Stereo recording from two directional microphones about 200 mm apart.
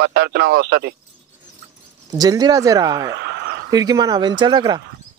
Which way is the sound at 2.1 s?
20° right (ahead or behind).